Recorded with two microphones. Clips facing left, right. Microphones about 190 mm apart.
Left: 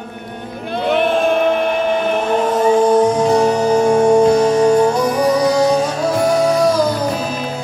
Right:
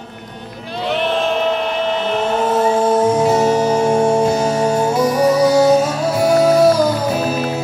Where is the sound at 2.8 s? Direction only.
5° right (ahead or behind).